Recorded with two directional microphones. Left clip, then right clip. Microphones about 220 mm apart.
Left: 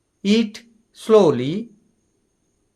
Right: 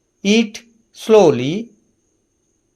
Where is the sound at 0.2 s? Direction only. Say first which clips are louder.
Right 4 dB; 10° right (ahead or behind).